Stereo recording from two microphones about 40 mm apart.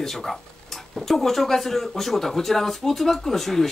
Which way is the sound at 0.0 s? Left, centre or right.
Centre.